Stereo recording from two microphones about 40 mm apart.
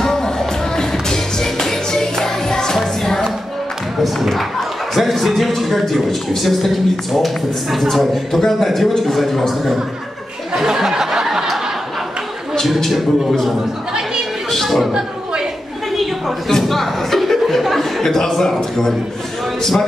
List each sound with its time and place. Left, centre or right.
0.0 s music: centre
4.0 s a man's voice: centre
10.5 s a sound: centre
12.6 s a man's voice: centre
13.6 s a sound: centre
14.5 s speech: centre
14.9 s a sound: centre
16.4 s chuckle: centre
18.0 s a man's voice: centre